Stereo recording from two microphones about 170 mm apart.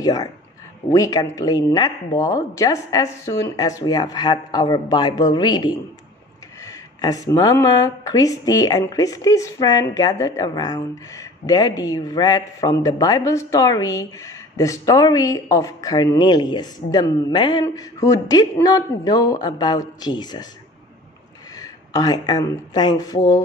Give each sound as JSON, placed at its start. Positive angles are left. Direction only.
{"t": 0.0, "sound": "speech", "side_deg": 20}
{"t": 21.5, "sound": "speech", "side_deg": 20}